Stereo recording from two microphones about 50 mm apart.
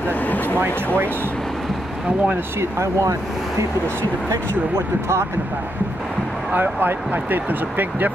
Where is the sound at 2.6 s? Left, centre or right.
Right.